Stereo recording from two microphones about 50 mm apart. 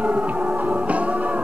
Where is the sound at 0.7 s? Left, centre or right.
Right.